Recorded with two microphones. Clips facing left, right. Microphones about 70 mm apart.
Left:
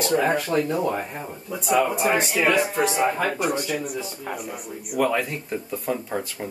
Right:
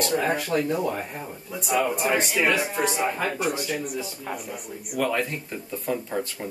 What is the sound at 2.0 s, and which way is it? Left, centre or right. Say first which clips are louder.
Speech: left 2 dB; left.